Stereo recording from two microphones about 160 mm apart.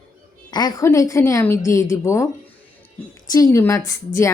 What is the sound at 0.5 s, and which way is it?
A woman's voice, 25° left (ahead or behind).